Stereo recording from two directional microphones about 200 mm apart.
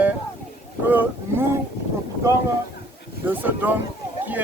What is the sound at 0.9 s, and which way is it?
Speech, 10° right (ahead or behind).